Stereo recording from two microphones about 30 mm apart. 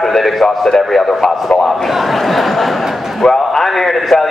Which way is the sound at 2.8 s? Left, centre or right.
Centre.